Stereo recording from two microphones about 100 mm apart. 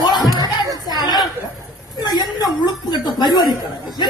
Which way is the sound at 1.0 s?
45° left (ahead or behind).